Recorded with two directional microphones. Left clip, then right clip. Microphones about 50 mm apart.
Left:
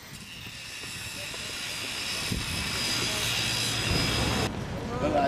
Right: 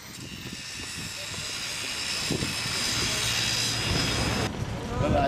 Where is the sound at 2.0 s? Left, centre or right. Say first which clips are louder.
Right 2 dB; right.